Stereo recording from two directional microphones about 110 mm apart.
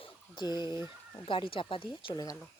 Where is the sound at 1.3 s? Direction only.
50° left (ahead or behind).